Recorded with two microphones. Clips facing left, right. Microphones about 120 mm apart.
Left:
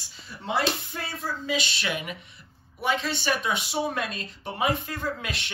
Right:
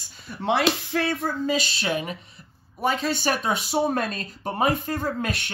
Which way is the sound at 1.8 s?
30° right (ahead or behind).